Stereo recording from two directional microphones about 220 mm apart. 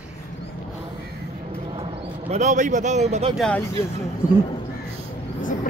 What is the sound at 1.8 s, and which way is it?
Speech, 30° right (ahead or behind).